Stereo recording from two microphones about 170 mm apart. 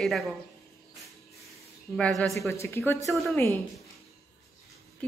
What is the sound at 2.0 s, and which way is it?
Speech, 5° left (ahead or behind).